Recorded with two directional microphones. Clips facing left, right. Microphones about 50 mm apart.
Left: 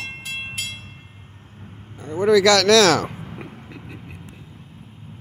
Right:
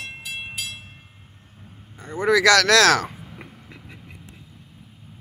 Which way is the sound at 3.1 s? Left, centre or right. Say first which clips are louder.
Left 6 dB; left.